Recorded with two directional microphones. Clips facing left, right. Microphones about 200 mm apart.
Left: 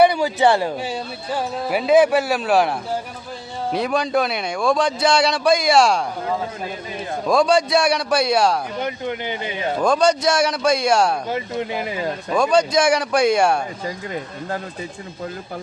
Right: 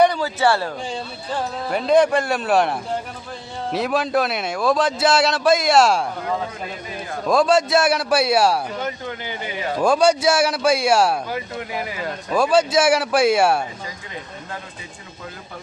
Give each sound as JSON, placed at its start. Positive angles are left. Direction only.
{"t": 0.0, "sound": "a man's voice", "side_deg": 15}
{"t": 7.3, "sound": "a man's voice", "side_deg": 0}
{"t": 8.8, "sound": "speech", "side_deg": 20}
{"t": 9.8, "sound": "a man's voice", "side_deg": -10}
{"t": 11.3, "sound": "speech", "side_deg": 25}
{"t": 12.3, "sound": "a man's voice", "side_deg": -5}